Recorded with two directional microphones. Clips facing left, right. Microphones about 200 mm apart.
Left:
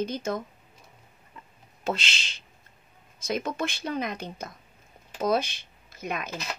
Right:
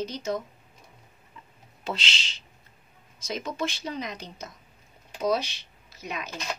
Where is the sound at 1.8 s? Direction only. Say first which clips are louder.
Left 3 dB; 50° left (ahead or behind).